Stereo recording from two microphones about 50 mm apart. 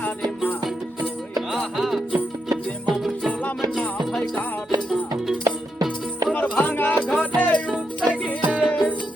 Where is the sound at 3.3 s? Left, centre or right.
Left.